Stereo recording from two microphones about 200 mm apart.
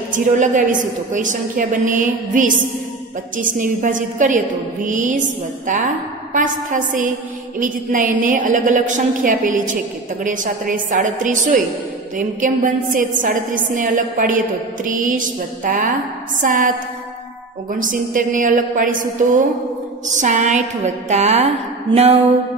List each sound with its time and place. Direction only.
0.1 s a woman's voice: 40° right (ahead or behind)
6.3 s a woman's voice: 40° right (ahead or behind)
17.7 s a woman's voice: 40° right (ahead or behind)
21.9 s music: 25° right (ahead or behind)